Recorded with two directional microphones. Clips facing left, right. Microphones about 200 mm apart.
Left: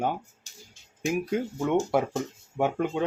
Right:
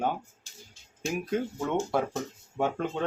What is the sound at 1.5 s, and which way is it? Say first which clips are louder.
Speech: left 7 dB; 20° left (ahead or behind).